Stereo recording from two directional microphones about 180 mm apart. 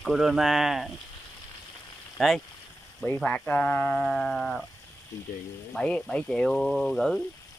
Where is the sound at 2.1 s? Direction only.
Centre (ahead or behind).